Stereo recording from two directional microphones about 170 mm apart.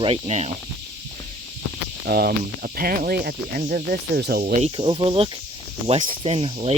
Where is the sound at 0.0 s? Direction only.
35° right (ahead or behind).